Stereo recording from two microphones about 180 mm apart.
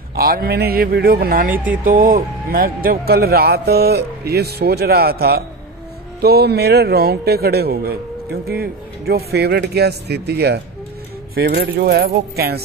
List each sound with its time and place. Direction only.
0.1 s speech: 55° right (ahead or behind)
1.5 s speech: 10° right (ahead or behind)
1.9 s speech: 50° right (ahead or behind)